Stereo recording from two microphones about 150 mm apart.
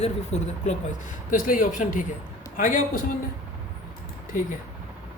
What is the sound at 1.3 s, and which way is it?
Speech, 65° left (ahead or behind).